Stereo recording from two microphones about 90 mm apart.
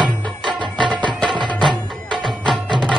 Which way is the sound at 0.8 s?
10° left (ahead or behind).